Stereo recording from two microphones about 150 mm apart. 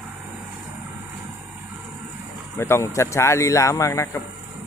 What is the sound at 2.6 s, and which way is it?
Speech, 15° left (ahead or behind).